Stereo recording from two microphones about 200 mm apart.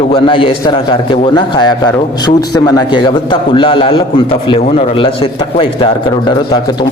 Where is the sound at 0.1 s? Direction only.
25° left (ahead or behind).